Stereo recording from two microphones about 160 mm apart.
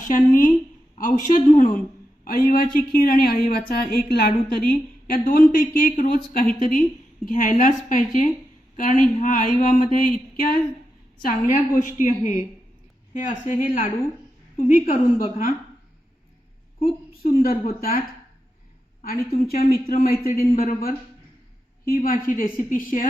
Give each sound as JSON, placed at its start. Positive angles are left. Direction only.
{"t": 0.1, "sound": "a woman's voice", "side_deg": 55}
{"t": 17.3, "sound": "a woman's voice", "side_deg": 65}
{"t": 19.0, "sound": "a man's voice", "side_deg": 70}